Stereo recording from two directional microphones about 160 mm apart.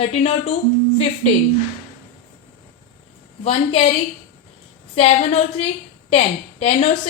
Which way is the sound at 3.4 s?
40° left (ahead or behind).